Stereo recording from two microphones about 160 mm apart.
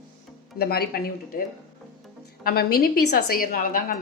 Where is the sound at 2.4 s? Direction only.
70° left (ahead or behind).